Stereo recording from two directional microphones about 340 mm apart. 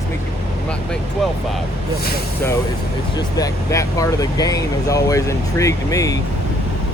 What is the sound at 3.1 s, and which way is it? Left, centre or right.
Speech, centre.